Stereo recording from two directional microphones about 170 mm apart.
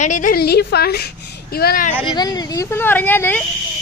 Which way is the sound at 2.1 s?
25° left (ahead or behind).